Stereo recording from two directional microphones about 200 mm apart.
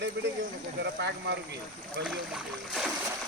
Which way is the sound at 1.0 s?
60° right (ahead or behind).